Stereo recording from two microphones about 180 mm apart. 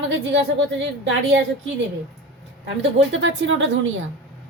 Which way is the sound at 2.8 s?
90° right.